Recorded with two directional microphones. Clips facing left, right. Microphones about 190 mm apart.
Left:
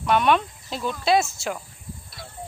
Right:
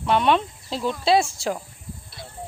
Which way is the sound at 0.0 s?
30° right (ahead or behind).